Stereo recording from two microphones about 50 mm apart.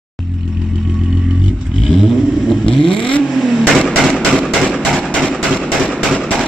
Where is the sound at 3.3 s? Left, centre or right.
Centre.